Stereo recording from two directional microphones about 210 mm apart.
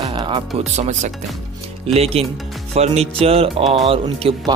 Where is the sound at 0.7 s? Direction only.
35° right (ahead or behind).